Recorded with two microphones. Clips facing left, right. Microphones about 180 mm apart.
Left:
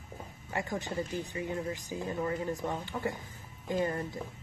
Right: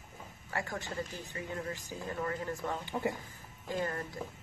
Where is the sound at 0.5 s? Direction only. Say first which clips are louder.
Left 3 dB; 20° left (ahead or behind).